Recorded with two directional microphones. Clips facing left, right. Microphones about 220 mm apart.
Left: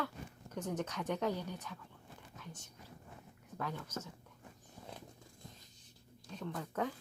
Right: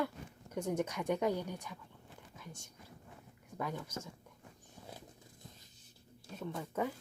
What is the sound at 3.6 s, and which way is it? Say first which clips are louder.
Speech: right 2 dB; 10° right (ahead or behind).